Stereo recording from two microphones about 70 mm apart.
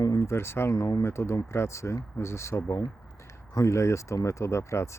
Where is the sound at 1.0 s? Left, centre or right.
Left.